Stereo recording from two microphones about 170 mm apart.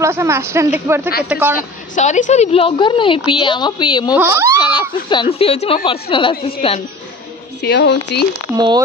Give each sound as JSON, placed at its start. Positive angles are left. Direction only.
{"t": 0.0, "sound": "a woman's voice", "side_deg": -15}
{"t": 2.0, "sound": "a woman's voice", "side_deg": 45}
{"t": 4.1, "sound": "a woman's voice", "side_deg": -15}
{"t": 4.6, "sound": "a sound", "side_deg": 25}
{"t": 5.1, "sound": "speech", "side_deg": 30}
{"t": 7.6, "sound": "speech", "side_deg": 75}
{"t": 8.5, "sound": "speech", "side_deg": -25}